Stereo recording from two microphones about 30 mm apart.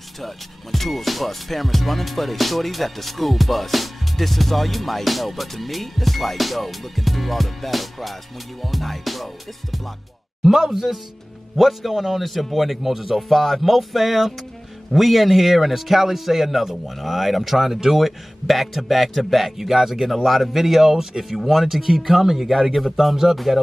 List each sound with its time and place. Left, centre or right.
0.2 s music: centre
10.4 s speech: centre
11.5 s music: centre
19.7 s speech: centre
20.2 s music: centre
20.9 s speech: centre
23.3 s music: centre